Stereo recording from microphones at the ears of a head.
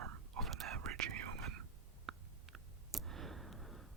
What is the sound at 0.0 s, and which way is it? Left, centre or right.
Whispering, right.